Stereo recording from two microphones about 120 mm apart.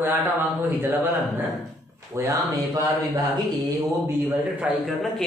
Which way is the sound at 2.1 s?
20° right (ahead or behind).